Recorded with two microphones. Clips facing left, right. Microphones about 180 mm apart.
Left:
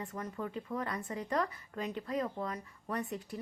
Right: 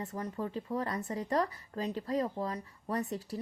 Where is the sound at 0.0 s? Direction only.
35° right (ahead or behind).